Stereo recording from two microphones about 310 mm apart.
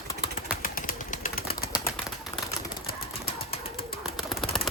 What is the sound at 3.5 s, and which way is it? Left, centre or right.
Bird, left.